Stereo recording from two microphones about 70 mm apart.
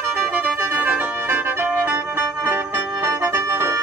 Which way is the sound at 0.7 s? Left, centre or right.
Right.